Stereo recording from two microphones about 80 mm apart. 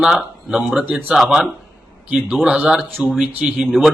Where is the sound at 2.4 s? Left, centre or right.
Centre.